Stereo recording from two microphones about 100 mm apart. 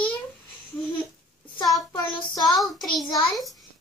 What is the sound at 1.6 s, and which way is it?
Child singing, 35° left (ahead or behind).